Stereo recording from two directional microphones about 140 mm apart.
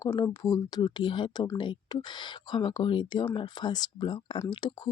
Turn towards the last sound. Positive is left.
turn(degrees=35)  # may be behind; listen again after turning